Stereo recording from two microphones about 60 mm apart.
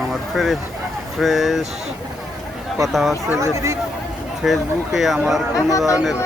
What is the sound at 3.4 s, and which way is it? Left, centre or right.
Speech, right.